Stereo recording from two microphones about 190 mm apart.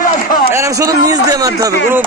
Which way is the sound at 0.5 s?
15° right (ahead or behind).